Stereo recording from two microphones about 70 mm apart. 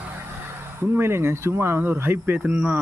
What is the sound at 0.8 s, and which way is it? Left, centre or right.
Speech, right.